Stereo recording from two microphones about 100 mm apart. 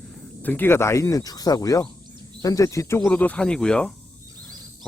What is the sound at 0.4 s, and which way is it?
Speech, 20° left (ahead or behind).